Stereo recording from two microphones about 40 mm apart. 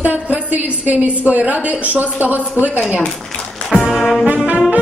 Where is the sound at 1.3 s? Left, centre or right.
Right.